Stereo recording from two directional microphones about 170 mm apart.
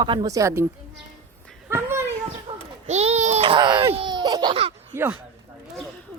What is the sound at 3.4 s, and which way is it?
Speech, 25° right (ahead or behind).